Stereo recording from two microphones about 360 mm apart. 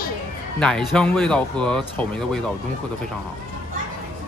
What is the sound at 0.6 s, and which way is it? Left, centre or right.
Speech, centre.